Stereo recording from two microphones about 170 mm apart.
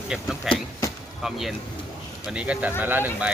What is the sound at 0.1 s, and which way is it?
Speech, centre (ahead or behind).